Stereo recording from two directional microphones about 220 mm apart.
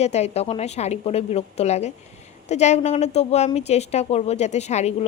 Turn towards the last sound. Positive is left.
turn(degrees=30)  # may be behind; listen again after turning